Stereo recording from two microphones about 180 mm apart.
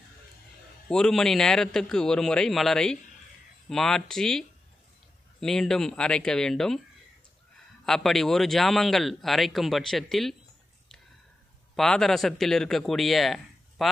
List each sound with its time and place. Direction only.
0.8 s speech: 5° left (ahead or behind)
7.8 s speech: centre (ahead or behind)
11.7 s speech: centre (ahead or behind)